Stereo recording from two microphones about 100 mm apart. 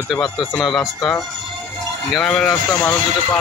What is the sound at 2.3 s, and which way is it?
Speech, 10° left (ahead or behind).